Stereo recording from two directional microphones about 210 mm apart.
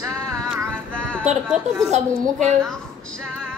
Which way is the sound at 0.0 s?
10° right (ahead or behind).